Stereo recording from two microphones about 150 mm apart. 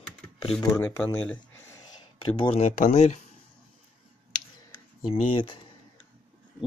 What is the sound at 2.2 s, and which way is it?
Speech, 35° left (ahead or behind).